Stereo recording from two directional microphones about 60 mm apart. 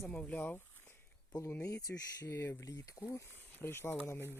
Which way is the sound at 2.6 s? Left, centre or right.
Left.